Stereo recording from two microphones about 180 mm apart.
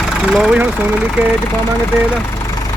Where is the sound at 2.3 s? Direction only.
20° left (ahead or behind).